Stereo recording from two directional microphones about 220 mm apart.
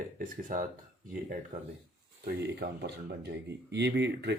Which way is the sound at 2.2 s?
50° right (ahead or behind).